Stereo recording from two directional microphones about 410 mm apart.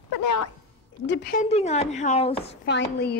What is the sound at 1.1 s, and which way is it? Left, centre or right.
A woman's voice, left.